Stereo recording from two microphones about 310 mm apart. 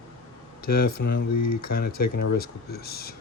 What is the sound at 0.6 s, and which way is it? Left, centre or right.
Speech, left.